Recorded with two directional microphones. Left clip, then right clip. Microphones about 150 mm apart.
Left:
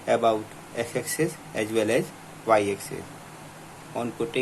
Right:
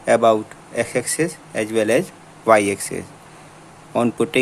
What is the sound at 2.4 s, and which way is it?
Speech, 45° right (ahead or behind).